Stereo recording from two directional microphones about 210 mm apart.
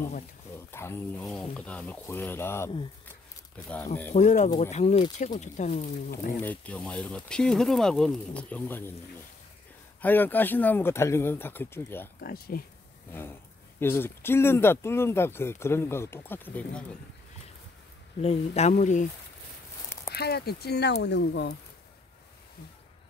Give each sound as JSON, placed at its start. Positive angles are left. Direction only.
{"t": 0.6, "sound": "speech", "side_deg": 10}
{"t": 3.1, "sound": "a sound", "side_deg": 5}
{"t": 4.1, "sound": "speech", "side_deg": 35}
{"t": 6.4, "sound": "speech", "side_deg": 5}
{"t": 10.0, "sound": "speech", "side_deg": 10}
{"t": 12.2, "sound": "speech", "side_deg": 45}
{"t": 13.7, "sound": "speech", "side_deg": 10}
{"t": 18.2, "sound": "speech", "side_deg": 30}
{"t": 20.1, "sound": "speech", "side_deg": 50}